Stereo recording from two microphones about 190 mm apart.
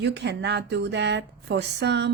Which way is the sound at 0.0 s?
65° right (ahead or behind).